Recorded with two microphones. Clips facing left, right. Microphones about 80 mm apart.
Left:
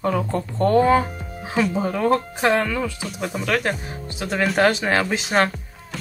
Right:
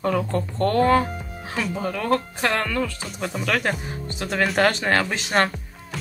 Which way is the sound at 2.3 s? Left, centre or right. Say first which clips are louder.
Left 3 dB; centre.